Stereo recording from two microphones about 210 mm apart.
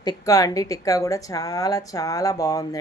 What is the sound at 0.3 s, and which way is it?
A woman's voice, 15° left (ahead or behind).